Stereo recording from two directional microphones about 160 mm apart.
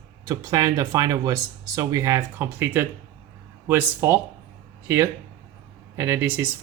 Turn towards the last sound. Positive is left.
turn(degrees=-15)  # may be behind; listen again after turning